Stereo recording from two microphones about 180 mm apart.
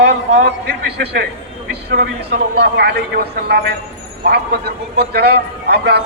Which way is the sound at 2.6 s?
70° right (ahead or behind).